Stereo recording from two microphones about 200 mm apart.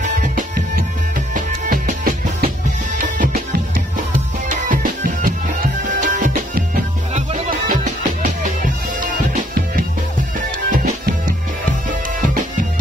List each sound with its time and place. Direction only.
0.0 s music: 40° right (ahead or behind)